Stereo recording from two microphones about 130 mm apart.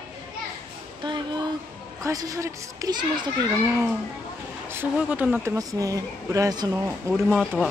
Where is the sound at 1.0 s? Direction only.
35° right (ahead or behind).